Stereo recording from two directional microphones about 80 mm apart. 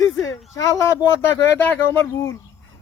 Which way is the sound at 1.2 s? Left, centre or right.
Left.